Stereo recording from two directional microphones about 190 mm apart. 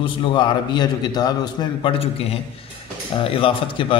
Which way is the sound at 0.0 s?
25° left (ahead or behind).